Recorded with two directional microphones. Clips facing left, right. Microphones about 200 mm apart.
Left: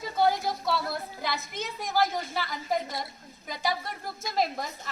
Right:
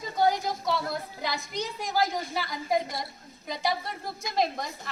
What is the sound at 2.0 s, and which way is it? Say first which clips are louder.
Speech: left 1 dB; 20° right (ahead or behind).